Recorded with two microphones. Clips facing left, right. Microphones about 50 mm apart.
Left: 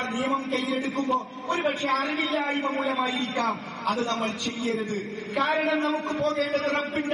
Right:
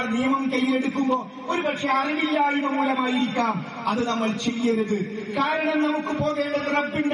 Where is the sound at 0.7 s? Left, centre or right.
Centre.